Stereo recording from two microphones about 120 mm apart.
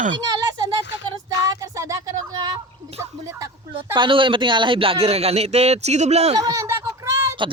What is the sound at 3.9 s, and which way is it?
A man's voice, 40° right (ahead or behind).